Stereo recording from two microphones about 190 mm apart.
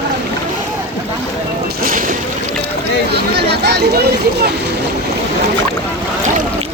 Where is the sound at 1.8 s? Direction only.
45° right (ahead or behind).